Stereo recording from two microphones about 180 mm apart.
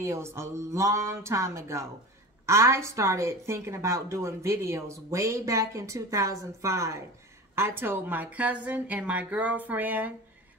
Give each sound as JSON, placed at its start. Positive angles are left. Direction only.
{"t": 0.0, "sound": "a woman's voice", "side_deg": -15}